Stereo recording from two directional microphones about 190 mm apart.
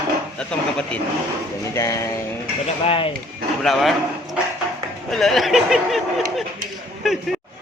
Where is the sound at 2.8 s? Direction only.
30° left (ahead or behind).